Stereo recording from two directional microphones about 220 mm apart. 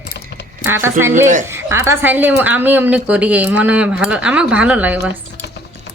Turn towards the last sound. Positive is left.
turn(degrees=-5)  # may be behind; listen again after turning